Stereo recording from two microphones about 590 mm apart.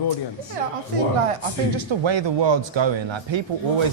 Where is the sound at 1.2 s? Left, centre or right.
Right.